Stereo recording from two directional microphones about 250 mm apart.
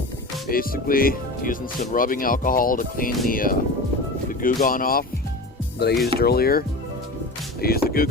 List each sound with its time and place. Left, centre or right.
0.4 s speech: left